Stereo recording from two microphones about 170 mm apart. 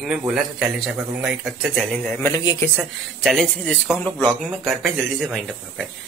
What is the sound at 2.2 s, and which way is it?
Speech, 20° left (ahead or behind).